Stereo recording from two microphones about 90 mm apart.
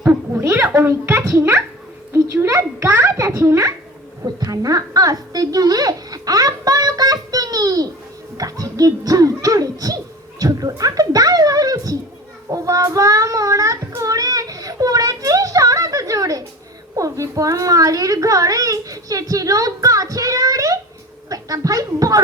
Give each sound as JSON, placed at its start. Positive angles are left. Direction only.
{"t": 0.0, "sound": "a sound", "side_deg": -20}
{"t": 0.8, "sound": "a child's voice", "side_deg": -30}
{"t": 12.5, "sound": "child singing", "side_deg": -35}
{"t": 17.0, "sound": "a child's voice", "side_deg": -40}